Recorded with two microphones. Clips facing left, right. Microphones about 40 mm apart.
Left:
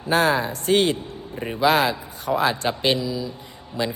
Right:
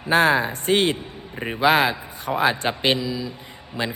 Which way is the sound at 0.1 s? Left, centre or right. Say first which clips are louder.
Right 2 dB; right.